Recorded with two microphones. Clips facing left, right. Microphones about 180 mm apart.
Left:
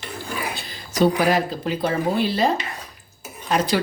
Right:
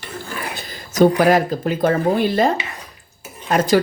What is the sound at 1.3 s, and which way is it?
Speech, 50° right (ahead or behind).